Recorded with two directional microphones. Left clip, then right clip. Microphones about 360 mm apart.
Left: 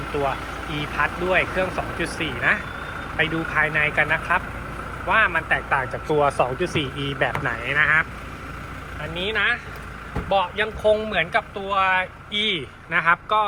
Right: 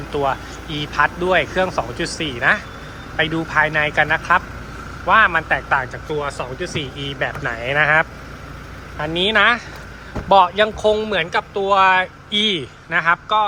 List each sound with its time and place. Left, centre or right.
0.1 s speech: centre
9.1 s speech: centre